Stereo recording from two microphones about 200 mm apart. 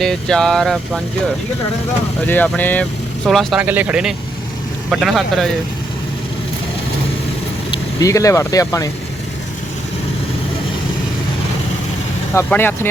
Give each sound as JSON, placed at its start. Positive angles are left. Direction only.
{"t": 0.0, "sound": "speech", "side_deg": 5}
{"t": 2.2, "sound": "speech", "side_deg": 10}
{"t": 7.7, "sound": "speech", "side_deg": 15}
{"t": 12.3, "sound": "speech", "side_deg": 10}